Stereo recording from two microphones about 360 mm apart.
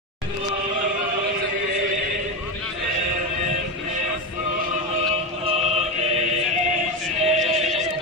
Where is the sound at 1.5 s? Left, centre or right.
Right.